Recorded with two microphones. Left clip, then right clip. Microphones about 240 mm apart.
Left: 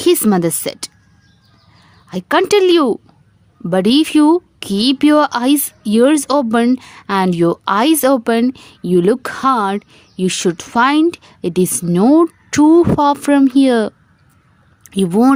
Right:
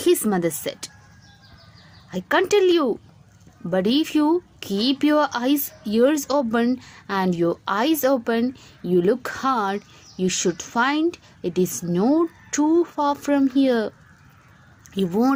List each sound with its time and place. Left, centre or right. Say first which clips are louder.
0.0 s speech: left 7 dB; left
2.0 s speech: left 6 dB; left